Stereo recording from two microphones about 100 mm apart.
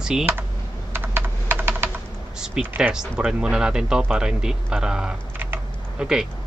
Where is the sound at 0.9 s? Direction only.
20° right (ahead or behind).